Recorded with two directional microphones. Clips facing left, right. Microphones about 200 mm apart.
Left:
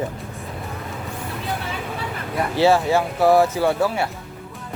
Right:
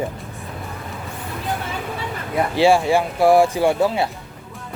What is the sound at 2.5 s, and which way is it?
Speech, 15° right (ahead or behind).